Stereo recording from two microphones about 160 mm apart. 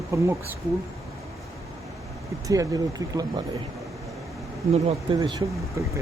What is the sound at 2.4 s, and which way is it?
Speech, 25° right (ahead or behind).